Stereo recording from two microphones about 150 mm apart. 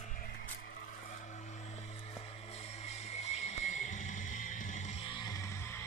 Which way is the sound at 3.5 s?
50° left (ahead or behind).